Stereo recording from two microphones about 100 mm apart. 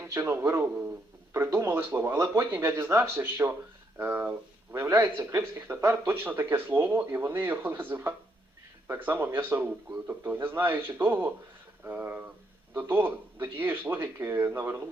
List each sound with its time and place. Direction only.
0.0 s speech: 25° right (ahead or behind)